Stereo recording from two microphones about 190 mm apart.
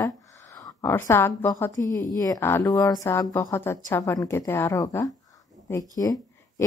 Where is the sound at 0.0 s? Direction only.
15° left (ahead or behind).